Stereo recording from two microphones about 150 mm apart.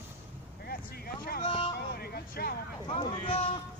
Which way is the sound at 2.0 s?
90° left.